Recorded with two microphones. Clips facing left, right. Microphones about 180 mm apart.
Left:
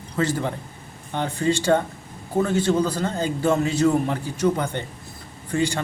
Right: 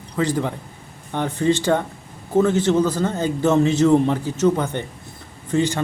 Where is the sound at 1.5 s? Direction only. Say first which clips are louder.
Even; 10° left (ahead or behind).